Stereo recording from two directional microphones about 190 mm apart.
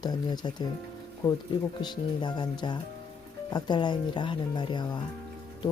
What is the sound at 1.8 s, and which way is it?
Speech, 25° left (ahead or behind).